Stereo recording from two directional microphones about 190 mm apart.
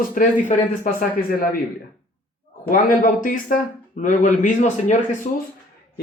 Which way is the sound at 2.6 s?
45° left (ahead or behind).